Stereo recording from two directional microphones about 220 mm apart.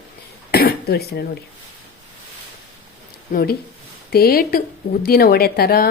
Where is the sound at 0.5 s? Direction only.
45° left (ahead or behind).